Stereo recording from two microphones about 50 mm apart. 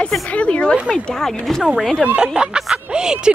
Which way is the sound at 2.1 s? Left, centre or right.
Centre.